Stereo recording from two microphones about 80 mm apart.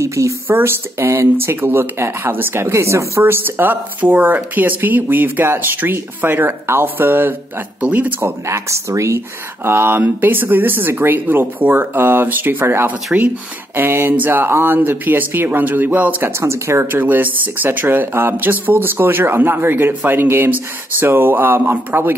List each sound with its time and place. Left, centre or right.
0.0 s speech: right
0.5 s speech: right
8.5 s speech: right
9.7 s speech: right